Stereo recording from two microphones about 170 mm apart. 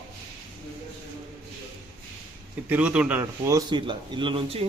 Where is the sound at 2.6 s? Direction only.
5° right (ahead or behind); by 4.6 s 30° right (ahead or behind).